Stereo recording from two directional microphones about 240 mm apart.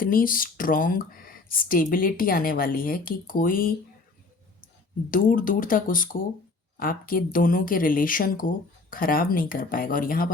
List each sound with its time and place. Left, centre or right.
0.0 s speech: left
5.1 s speech: left